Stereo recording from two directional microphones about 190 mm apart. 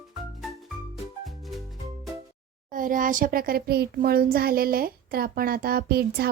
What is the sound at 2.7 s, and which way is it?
A child's voice, 45° right (ahead or behind).